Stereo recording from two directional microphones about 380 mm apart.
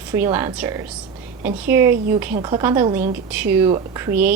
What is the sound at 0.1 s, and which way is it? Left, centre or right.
Speech, centre.